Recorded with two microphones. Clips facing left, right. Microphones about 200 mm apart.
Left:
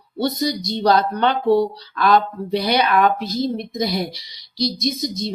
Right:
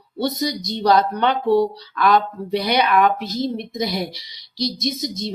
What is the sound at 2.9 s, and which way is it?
Speech, 40° left (ahead or behind).